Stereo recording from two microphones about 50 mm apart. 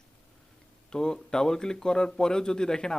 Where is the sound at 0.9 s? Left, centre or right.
Centre.